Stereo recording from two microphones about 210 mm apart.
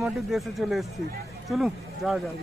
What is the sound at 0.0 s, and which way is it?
Speech, centre (ahead or behind).